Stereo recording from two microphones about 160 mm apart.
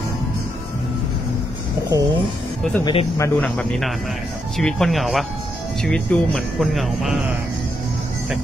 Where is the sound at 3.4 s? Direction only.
5° left (ahead or behind).